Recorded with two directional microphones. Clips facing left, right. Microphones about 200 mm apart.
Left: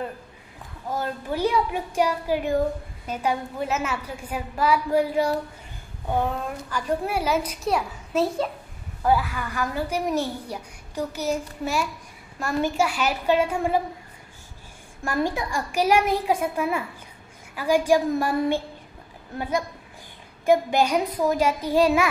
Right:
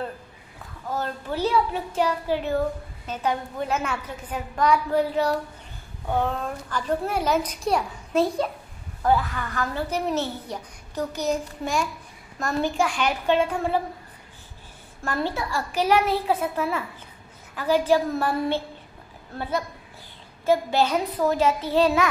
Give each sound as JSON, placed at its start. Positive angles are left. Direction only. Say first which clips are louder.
{"t": 0.8, "sound": "a woman's voice", "louder": "left 1 dB", "side_deg": 10}
{"t": 6.7, "sound": "a child's voice", "louder": "even", "side_deg": 10}
{"t": 15.0, "sound": "a woman's voice", "louder": "left 2 dB", "side_deg": 15}